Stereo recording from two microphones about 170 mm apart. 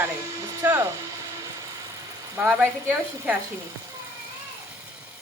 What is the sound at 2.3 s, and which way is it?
Speech, 10° right (ahead or behind).